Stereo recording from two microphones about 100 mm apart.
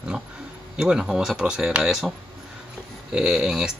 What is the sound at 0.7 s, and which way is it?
Speech, 5° right (ahead or behind).